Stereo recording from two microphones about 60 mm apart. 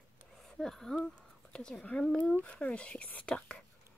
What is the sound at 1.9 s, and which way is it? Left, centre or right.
Speech, left.